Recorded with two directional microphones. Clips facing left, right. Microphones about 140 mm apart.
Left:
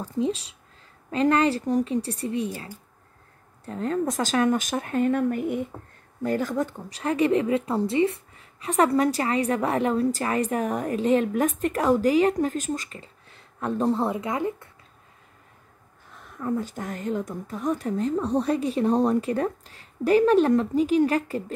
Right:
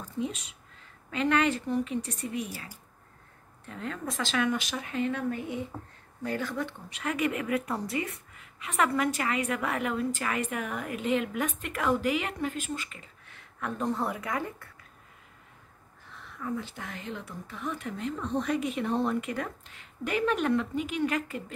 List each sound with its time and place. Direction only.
0.0 s a woman's voice: 30° left (ahead or behind)
16.3 s a woman's voice: 45° left (ahead or behind)